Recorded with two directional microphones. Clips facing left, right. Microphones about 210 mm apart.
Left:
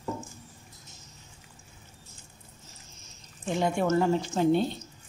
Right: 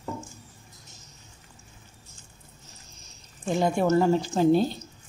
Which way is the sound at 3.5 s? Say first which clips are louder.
Right 3 dB; 40° right (ahead or behind).